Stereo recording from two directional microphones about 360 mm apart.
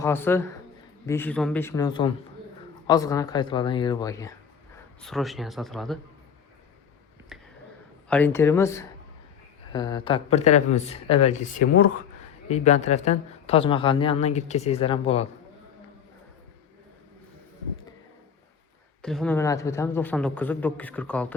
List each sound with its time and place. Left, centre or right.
0.0 s a woman's voice: centre
7.3 s a sound: centre
8.1 s a woman's voice: centre
19.0 s a man's voice: centre